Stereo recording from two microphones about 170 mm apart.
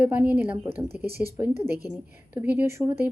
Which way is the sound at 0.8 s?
65° right (ahead or behind).